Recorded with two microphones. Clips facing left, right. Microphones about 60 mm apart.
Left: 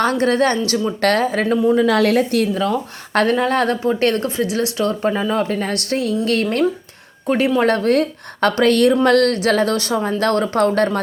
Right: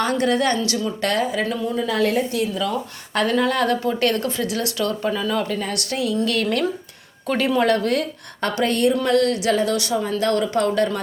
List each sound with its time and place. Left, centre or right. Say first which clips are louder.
0.0 s a woman's voice: left 4 dB; left
1.9 s a woman's voice: left 5 dB; left
2.6 s a woman's voice: left 4 dB; left
7.3 s speech: left 4 dB; left
7.6 s a woman's voice: left 3 dB; left
8.4 s speech: left 6 dB; left
8.6 s speech: left 5 dB; left
9.0 s speech: left 4 dB; left